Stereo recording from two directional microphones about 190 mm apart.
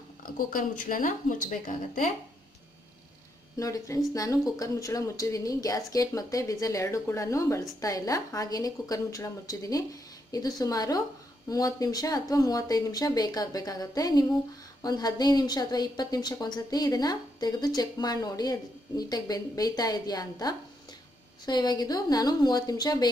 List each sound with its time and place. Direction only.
0.2 s speech: 45° left (ahead or behind)
3.5 s a woman's voice: 15° left (ahead or behind)